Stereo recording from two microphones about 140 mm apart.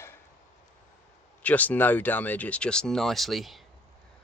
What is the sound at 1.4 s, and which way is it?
Speech, 10° left (ahead or behind).